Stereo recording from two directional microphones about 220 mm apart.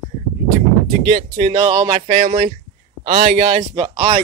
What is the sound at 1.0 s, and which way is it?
A man's voice, 25° right (ahead or behind).